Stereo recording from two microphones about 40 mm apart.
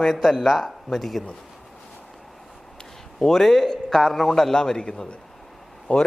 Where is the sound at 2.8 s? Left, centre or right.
Centre.